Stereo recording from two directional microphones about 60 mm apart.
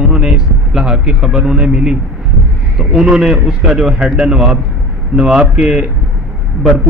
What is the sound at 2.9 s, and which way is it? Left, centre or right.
Speech, centre.